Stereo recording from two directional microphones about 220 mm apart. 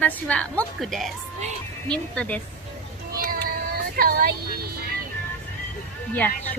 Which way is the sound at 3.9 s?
40° right (ahead or behind).